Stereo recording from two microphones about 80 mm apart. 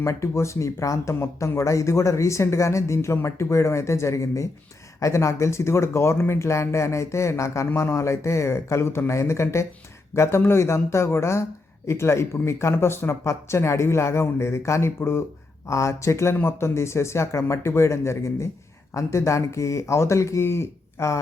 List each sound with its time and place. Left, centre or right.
0.0 s speech: left